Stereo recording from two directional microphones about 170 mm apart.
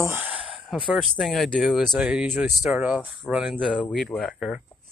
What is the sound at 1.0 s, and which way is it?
Speech, centre (ahead or behind).